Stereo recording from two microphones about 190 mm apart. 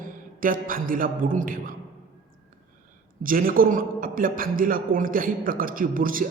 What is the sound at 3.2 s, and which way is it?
A man's voice, 45° right (ahead or behind).